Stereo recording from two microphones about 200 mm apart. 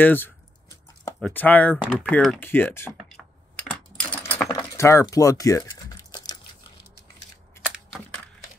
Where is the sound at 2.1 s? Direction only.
5° left (ahead or behind).